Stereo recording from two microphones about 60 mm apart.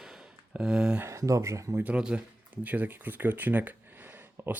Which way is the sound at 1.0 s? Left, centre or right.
Right.